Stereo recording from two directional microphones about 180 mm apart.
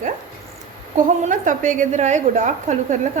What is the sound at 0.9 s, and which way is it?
A woman's voice, 45° right (ahead or behind).